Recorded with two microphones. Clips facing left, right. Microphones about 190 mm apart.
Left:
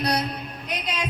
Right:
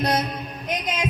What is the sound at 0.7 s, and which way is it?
Music, 20° right (ahead or behind).